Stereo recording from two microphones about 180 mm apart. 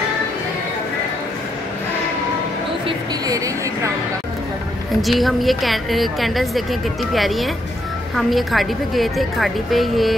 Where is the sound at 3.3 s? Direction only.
20° right (ahead or behind).